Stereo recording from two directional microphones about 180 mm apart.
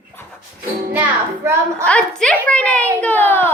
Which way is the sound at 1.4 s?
15° right (ahead or behind).